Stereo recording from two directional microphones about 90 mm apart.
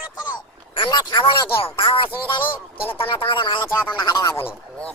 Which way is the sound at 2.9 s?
85° left.